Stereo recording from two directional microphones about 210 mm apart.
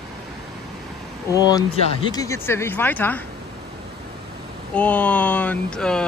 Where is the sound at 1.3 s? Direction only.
20° left (ahead or behind).